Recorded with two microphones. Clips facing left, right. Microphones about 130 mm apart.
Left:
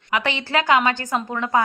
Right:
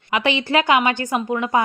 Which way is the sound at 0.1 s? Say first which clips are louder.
Right 3 dB; 20° right (ahead or behind).